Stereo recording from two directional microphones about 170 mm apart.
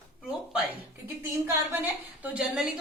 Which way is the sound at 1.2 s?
15° right (ahead or behind).